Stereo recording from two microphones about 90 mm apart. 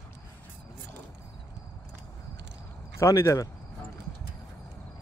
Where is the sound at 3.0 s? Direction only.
35° left (ahead or behind).